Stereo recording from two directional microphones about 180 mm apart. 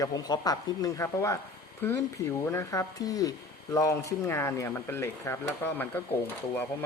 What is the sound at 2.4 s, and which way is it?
Speech, 15° left (ahead or behind).